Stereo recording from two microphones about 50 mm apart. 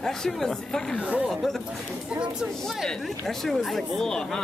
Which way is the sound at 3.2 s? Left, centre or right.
Centre.